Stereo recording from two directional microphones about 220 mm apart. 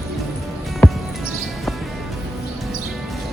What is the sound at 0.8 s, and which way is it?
Music, 5° left (ahead or behind).